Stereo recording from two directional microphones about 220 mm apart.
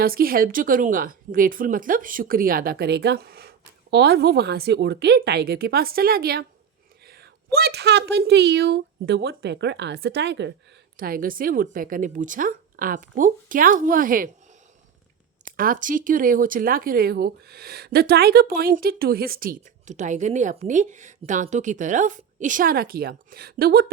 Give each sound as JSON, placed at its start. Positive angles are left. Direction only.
{"t": 0.0, "sound": "a woman's voice", "side_deg": -40}
{"t": 10.9, "sound": "speech", "side_deg": -40}
{"t": 15.4, "sound": "speech", "side_deg": -40}